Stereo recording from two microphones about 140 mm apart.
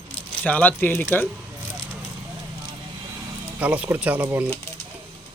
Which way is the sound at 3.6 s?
10° right (ahead or behind).